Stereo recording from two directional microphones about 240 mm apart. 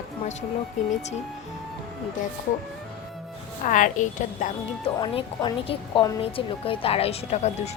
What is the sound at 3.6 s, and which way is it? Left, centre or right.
A woman's voice, left.